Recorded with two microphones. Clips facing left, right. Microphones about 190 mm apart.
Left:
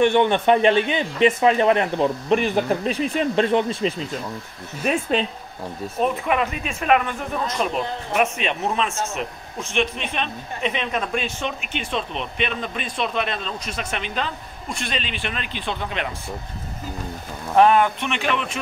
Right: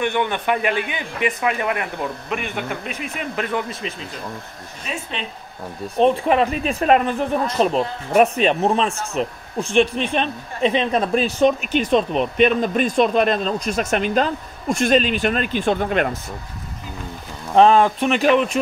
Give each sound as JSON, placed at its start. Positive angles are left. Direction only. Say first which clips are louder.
{"t": 0.0, "sound": "a man's voice", "louder": "left 5 dB", "side_deg": 25}
{"t": 5.9, "sound": "speech", "louder": "right 6 dB", "side_deg": -30}
{"t": 17.6, "sound": "speech", "louder": "right 3 dB", "side_deg": -30}